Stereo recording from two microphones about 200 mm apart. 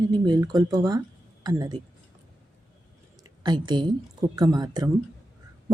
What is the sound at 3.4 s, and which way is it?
Speech, 20° right (ahead or behind).